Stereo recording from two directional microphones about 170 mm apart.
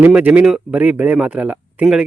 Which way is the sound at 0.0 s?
10° right (ahead or behind).